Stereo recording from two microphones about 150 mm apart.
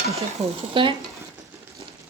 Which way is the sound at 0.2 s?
40° right (ahead or behind).